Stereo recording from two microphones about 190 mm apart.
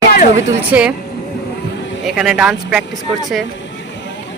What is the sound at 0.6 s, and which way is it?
Speech, 5° right (ahead or behind).